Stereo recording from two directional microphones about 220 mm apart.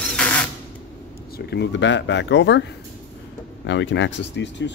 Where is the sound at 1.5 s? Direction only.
50° left (ahead or behind).